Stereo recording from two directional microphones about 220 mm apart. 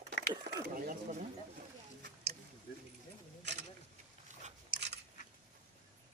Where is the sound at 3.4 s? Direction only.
50° right (ahead or behind).